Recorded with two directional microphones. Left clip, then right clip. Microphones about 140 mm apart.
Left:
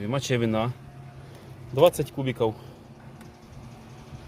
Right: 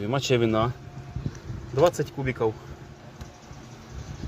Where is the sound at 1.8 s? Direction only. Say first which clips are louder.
Left 2 dB; 40° left (ahead or behind).